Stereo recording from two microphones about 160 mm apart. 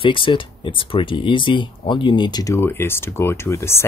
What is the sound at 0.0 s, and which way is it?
Speech, 30° left (ahead or behind).